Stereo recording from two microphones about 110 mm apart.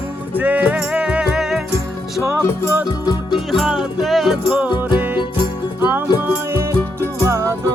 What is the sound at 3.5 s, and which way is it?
Music, 5° right (ahead or behind).